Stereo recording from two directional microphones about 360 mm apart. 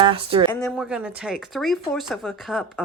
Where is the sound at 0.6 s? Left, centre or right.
Centre.